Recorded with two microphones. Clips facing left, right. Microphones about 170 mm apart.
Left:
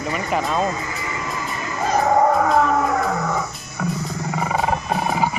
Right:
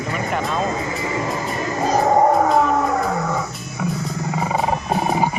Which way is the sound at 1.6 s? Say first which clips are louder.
Right 1 dB; 30° right (ahead or behind).